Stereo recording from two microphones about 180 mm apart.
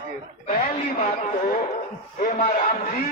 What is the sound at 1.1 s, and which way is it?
A man's voice, 40° left (ahead or behind).